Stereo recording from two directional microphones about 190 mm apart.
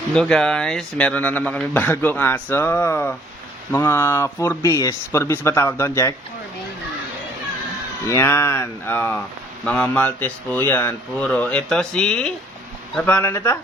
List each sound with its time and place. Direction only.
0.1 s speech: 5° left (ahead or behind)
8.0 s speech: 15° left (ahead or behind)